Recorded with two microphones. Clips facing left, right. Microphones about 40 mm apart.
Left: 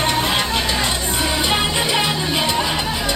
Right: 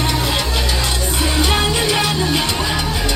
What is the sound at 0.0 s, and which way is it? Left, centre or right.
Music, left.